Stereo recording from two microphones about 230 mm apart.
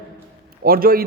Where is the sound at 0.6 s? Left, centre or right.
Right.